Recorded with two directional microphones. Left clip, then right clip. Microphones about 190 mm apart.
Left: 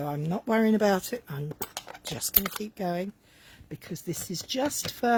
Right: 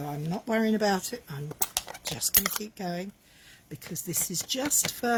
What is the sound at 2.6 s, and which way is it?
Speech, 50° left (ahead or behind).